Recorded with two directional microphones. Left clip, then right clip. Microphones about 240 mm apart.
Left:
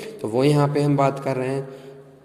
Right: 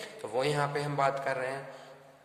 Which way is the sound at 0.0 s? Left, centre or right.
Left.